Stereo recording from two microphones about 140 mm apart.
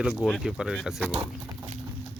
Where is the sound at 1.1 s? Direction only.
45° right (ahead or behind).